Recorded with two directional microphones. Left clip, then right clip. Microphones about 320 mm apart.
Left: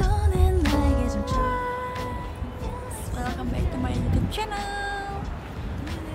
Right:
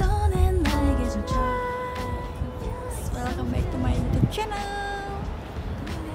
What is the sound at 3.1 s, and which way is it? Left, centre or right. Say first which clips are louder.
Music: even; centre.